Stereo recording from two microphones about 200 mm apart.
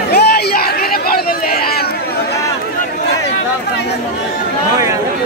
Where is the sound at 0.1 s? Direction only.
50° left (ahead or behind).